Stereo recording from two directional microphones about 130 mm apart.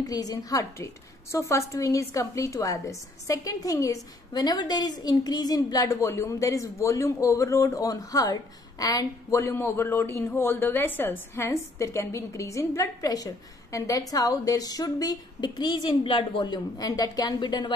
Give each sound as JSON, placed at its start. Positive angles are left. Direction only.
{"t": 0.0, "sound": "a woman's voice", "side_deg": 30}